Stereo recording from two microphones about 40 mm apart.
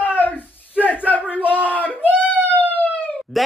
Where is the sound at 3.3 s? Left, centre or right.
Centre.